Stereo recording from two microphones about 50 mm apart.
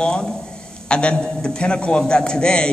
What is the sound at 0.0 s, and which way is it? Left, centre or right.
A man's voice, centre.